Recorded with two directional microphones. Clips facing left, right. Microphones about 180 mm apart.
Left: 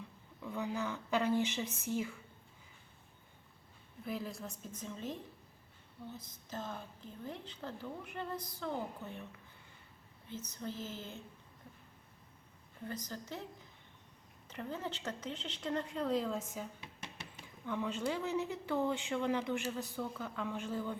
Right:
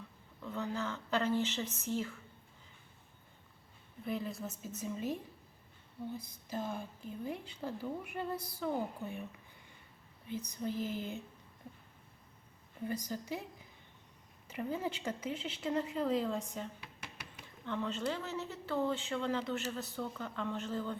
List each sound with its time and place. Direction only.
0.4 s speech: 10° left (ahead or behind)
4.0 s a woman's voice: centre (ahead or behind)
10.2 s a woman's voice: 15° right (ahead or behind)
12.9 s a woman's voice: 10° right (ahead or behind)
14.4 s a woman's voice: 10° right (ahead or behind)
16.8 s a sound: 25° left (ahead or behind)
17.7 s speech: 10° left (ahead or behind)